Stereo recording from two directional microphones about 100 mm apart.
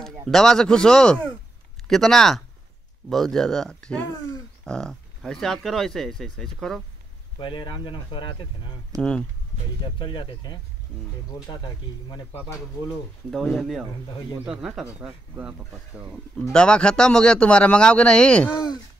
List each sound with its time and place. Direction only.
0.3 s speech: 5° left (ahead or behind)
7.3 s speech: 55° left (ahead or behind)
9.9 s speech: 50° left (ahead or behind)
13.3 s speech: 5° left (ahead or behind)
15.0 s speech: 15° right (ahead or behind)
16.5 s speech: 10° left (ahead or behind)